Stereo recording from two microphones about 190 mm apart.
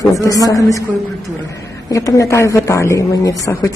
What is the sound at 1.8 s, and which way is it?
A woman's voice, 15° left (ahead or behind).